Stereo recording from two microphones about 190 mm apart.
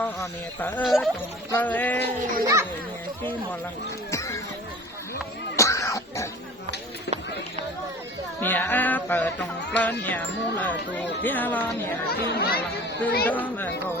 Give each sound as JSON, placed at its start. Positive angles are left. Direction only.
{"t": 0.0, "sound": "speech", "side_deg": 10}
{"t": 1.5, "sound": "speech", "side_deg": 10}
{"t": 2.4, "sound": "a child's voice", "side_deg": -15}
{"t": 4.1, "sound": "a sound", "side_deg": 15}
{"t": 5.5, "sound": "throat clearing", "side_deg": 15}
{"t": 8.4, "sound": "speech", "side_deg": 10}
{"t": 12.1, "sound": "speech", "side_deg": 55}
{"t": 13.2, "sound": "speech", "side_deg": 10}